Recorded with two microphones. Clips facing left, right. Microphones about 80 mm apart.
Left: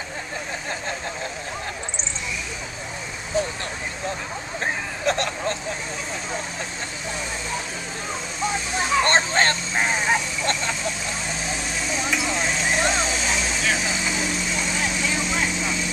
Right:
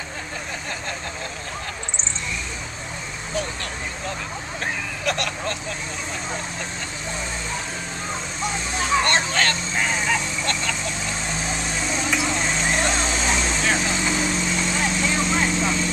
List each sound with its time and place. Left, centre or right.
5.0 s vehicle: left
8.5 s vehicle: centre
9.0 s vehicle: left
10.7 s vehicle: centre